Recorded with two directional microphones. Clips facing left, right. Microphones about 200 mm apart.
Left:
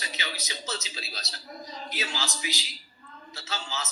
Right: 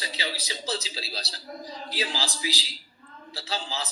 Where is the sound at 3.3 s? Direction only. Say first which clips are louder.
Right 3 dB; 30° right (ahead or behind).